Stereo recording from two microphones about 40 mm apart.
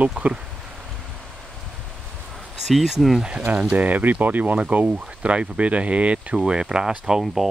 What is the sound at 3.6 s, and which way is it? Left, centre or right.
Speech, right.